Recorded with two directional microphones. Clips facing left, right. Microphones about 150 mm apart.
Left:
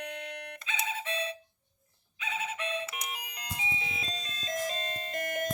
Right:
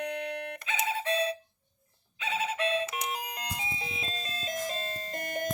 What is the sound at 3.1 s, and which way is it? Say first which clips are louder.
Music: right 6 dB; 40° right (ahead or behind).